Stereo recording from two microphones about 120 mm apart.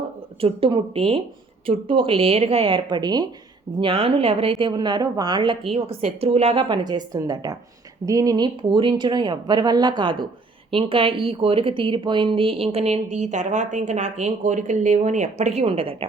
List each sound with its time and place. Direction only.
0.4 s a woman's voice: 50° right (ahead or behind); by 3.2 s 35° right (ahead or behind)
3.8 s a woman's voice: 50° right (ahead or behind)
5.7 s a woman's voice: 55° right (ahead or behind); by 8.4 s 30° right (ahead or behind)
8.7 s speech: 45° right (ahead or behind)